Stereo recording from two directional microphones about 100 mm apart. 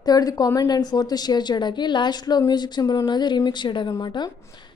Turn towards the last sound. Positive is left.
turn(degrees=45)  # may be behind; listen again after turning